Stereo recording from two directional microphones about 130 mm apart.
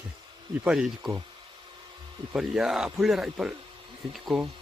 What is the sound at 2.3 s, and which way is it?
Speech, 5° right (ahead or behind).